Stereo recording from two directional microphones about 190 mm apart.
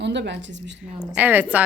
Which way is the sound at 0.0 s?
65° right (ahead or behind).